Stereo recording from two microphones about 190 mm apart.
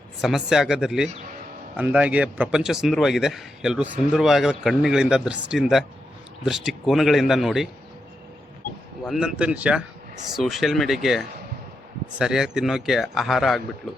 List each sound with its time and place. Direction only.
0.2 s a man's voice: centre (ahead or behind)
9.0 s a man's voice: 5° right (ahead or behind)